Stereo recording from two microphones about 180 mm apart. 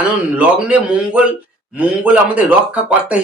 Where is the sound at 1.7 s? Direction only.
5° right (ahead or behind).